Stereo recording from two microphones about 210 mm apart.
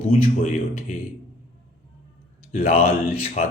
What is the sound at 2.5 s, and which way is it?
Speech, 40° left (ahead or behind).